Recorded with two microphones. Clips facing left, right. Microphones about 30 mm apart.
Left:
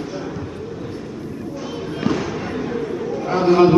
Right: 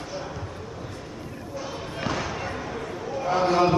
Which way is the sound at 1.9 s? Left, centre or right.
Centre.